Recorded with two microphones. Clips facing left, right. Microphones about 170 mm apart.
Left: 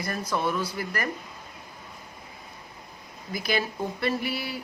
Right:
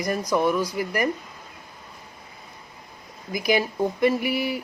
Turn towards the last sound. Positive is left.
turn(degrees=-15)  # may be behind; listen again after turning